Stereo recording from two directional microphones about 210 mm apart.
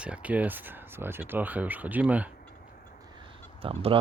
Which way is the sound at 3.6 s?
25° right (ahead or behind).